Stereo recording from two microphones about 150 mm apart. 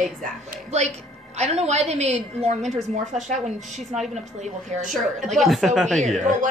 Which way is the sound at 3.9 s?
Centre (ahead or behind).